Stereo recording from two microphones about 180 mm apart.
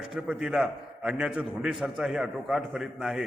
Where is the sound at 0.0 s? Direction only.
5° right (ahead or behind).